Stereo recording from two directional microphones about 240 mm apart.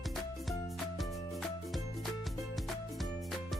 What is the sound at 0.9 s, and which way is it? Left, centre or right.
Music, centre.